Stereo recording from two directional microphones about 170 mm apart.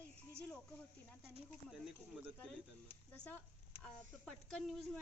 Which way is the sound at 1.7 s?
5° right (ahead or behind).